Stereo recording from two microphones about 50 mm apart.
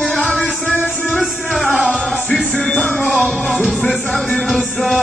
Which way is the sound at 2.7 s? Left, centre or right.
Left.